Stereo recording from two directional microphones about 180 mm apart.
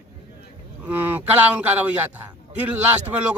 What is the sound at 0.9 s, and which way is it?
A man's voice, 10° right (ahead or behind).